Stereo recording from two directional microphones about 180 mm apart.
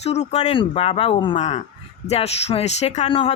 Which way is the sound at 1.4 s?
40° left (ahead or behind).